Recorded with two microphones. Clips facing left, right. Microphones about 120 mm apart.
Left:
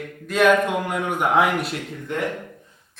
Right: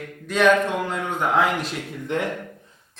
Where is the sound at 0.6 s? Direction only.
15° left (ahead or behind).